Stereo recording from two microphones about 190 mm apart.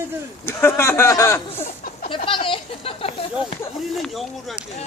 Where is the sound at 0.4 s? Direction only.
15° left (ahead or behind); by 3.4 s 30° left (ahead or behind).